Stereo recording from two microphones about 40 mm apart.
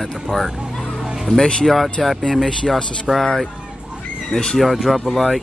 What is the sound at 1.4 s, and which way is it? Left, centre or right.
Speech, centre.